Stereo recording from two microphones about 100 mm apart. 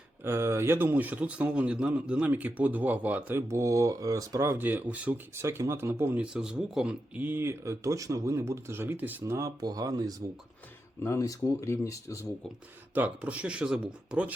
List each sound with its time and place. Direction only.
0.3 s speech: 25° right (ahead or behind)
5.4 s speech: 25° right (ahead or behind)
6.3 s speech: 10° right (ahead or behind); by 9.5 s 25° right (ahead or behind)
9.6 s speech: 40° right (ahead or behind)
11.0 s speech: 30° left (ahead or behind)
12.9 s speech: 15° right (ahead or behind)